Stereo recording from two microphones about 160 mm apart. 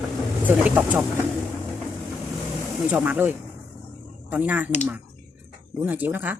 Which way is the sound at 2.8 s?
10° right (ahead or behind).